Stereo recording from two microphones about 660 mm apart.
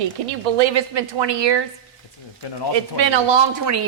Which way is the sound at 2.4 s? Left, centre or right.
Left.